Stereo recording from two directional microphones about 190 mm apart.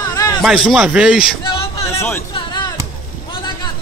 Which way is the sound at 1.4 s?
20° left (ahead or behind).